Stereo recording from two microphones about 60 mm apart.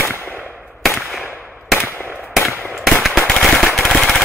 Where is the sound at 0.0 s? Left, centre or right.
Left.